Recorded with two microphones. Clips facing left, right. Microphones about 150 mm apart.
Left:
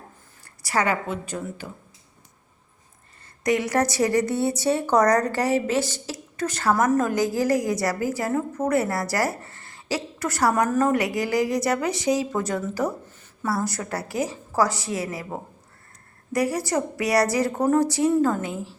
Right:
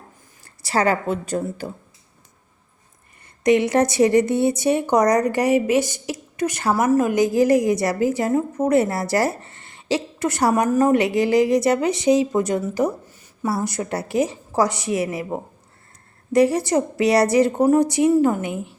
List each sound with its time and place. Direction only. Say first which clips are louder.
0.4 s a woman's voice: right 4 dB; 30° right (ahead or behind)
3.4 s a woman's voice: right 5 dB; 25° right (ahead or behind)
7.1 s a woman's voice: right 5 dB; 20° right (ahead or behind)